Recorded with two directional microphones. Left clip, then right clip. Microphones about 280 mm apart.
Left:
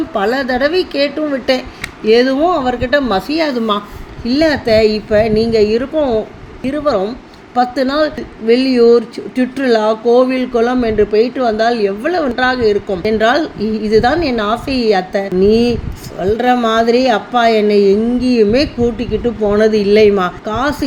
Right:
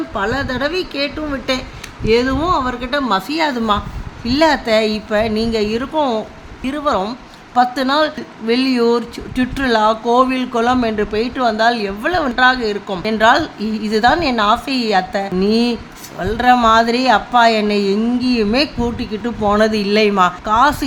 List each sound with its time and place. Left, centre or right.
0.1 s a woman's voice: centre